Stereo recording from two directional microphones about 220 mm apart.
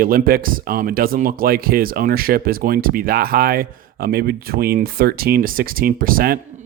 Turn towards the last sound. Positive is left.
turn(degrees=-40)  # may be behind; listen again after turning